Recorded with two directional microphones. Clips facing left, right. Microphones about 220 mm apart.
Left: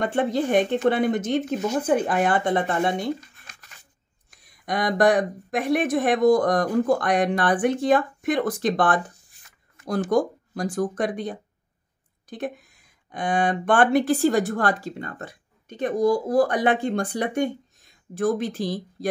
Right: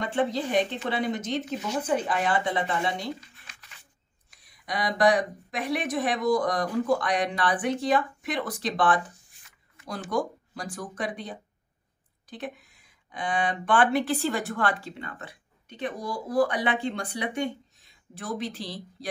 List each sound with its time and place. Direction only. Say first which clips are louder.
0.0 s speech: left 4 dB; 50° left (ahead or behind)